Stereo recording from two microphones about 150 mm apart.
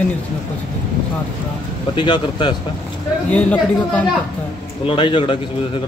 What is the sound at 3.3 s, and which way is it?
Speech, 10° left (ahead or behind).